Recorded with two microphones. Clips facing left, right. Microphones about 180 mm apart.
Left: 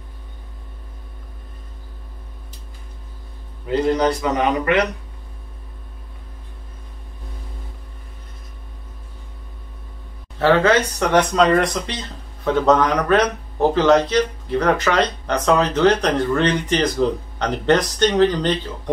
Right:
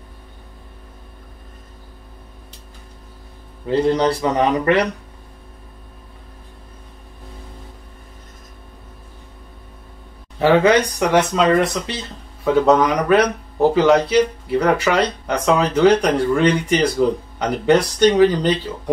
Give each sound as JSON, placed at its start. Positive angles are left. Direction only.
{"t": 3.6, "sound": "a man's voice", "side_deg": -30}
{"t": 10.4, "sound": "speech", "side_deg": -15}